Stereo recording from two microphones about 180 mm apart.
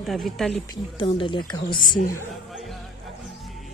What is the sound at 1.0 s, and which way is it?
Speech, 30° left (ahead or behind).